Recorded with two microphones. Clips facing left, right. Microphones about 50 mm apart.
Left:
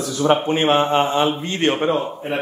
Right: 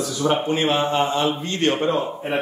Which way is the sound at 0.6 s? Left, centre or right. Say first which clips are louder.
Left 3 dB; left.